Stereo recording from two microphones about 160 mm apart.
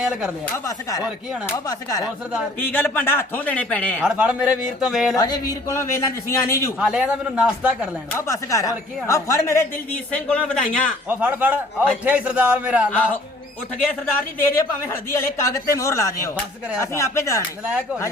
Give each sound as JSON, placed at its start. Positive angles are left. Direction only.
{"t": 0.4, "sound": "speech", "side_deg": 20}
{"t": 4.0, "sound": "a man's voice", "side_deg": -5}
{"t": 5.1, "sound": "speech", "side_deg": 25}
{"t": 6.7, "sound": "a man's voice", "side_deg": -5}
{"t": 8.1, "sound": "speech", "side_deg": 20}
{"t": 11.1, "sound": "a man's voice", "side_deg": -10}
{"t": 14.3, "sound": "speech", "side_deg": 15}